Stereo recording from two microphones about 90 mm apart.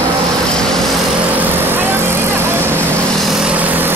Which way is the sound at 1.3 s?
25° right (ahead or behind).